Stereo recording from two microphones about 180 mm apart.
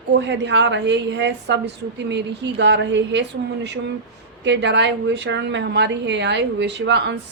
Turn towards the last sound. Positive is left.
turn(degrees=-75)  # may be behind; listen again after turning